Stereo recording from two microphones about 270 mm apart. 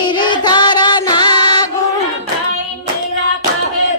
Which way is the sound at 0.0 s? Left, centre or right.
Centre.